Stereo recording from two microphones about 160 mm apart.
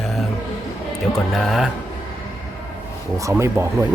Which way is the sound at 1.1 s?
Centre (ahead or behind).